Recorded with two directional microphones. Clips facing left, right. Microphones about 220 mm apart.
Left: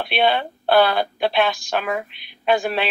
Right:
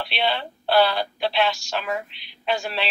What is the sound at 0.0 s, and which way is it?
Speech, 50° left (ahead or behind).